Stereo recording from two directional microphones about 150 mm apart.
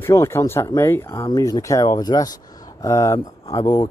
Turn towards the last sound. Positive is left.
turn(degrees=25)  # may be behind; listen again after turning